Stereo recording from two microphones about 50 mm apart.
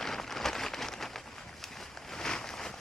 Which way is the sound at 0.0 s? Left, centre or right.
Centre.